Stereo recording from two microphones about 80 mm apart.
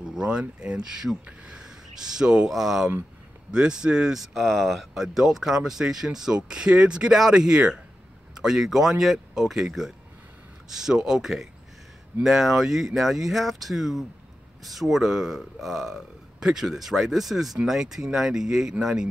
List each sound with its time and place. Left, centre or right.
0.1 s speech: centre